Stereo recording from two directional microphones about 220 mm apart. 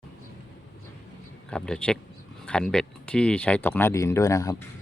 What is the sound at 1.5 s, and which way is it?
Speech, 5° left (ahead or behind).